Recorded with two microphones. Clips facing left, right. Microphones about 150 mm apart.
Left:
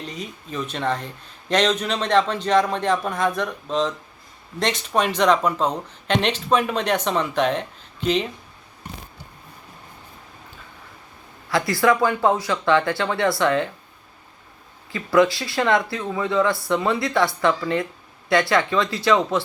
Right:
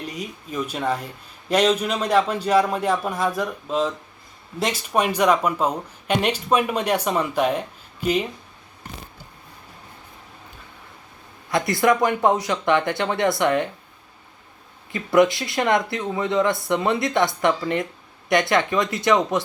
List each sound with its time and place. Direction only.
0.0 s speech: 10° right (ahead or behind)
11.5 s speech: 20° right (ahead or behind)
14.9 s speech: 20° right (ahead or behind)